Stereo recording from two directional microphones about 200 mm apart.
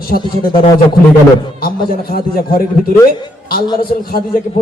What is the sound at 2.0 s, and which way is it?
A man's voice, 50° left (ahead or behind).